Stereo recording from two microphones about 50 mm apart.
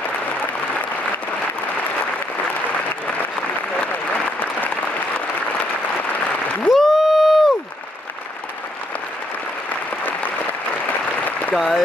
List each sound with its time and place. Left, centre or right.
3.9 s applause: left
6.7 s a sound: centre
10.9 s applause: left
11.5 s speech: centre